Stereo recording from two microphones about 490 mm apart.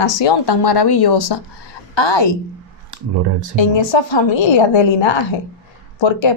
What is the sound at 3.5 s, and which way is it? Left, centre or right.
A woman's voice, left.